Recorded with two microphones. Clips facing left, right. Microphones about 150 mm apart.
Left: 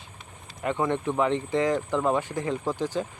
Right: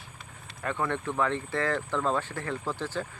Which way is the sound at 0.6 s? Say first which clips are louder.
Left 5 dB; 20° left (ahead or behind).